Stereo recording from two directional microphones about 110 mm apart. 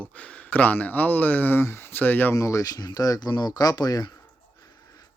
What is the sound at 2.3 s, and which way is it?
Speech, 30° left (ahead or behind).